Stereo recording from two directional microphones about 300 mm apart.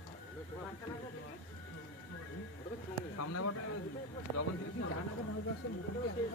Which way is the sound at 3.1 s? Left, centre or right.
Left.